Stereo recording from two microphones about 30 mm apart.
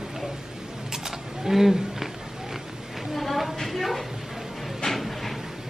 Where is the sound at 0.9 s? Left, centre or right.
Centre.